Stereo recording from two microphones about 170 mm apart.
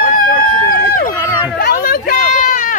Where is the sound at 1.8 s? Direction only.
55° left (ahead or behind).